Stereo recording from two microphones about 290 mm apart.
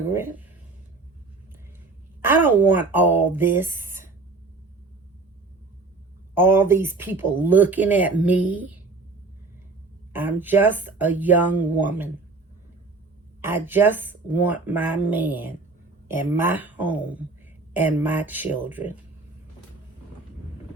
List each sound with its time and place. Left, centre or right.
0.1 s speech: centre
2.2 s speech: centre
6.3 s speech: centre
10.1 s speech: centre
13.4 s speech: centre